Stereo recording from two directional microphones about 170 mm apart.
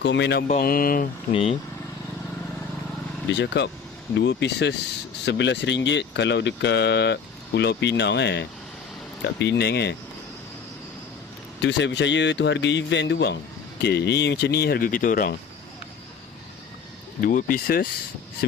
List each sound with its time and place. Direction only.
0.0 s speech: 90° left
0.6 s speech: 60° left (ahead or behind)
1.3 s speech: 35° left (ahead or behind)
3.2 s speech: 90° left
11.6 s speech: 90° left; by 15.4 s 55° left (ahead or behind)
17.2 s speech: 55° left (ahead or behind)